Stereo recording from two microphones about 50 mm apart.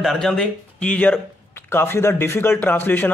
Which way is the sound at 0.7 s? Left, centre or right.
Left.